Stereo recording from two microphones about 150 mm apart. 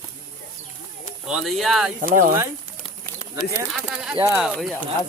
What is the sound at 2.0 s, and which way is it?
Speech, 65° right (ahead or behind).